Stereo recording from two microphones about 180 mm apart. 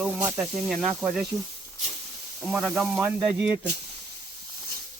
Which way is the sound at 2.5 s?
Centre (ahead or behind).